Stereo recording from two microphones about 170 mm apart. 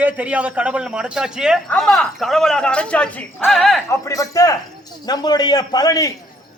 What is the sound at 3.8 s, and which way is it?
A man's voice, 15° left (ahead or behind).